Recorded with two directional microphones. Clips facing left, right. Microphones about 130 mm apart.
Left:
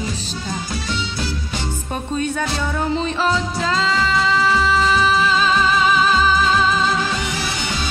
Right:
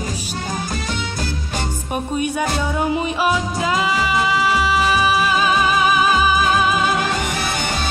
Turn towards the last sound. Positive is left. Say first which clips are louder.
# right 2 dB
turn(degrees=-50)  # may be behind; listen again after turning